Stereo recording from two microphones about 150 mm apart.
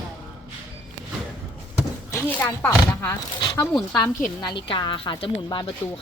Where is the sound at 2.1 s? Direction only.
15° left (ahead or behind).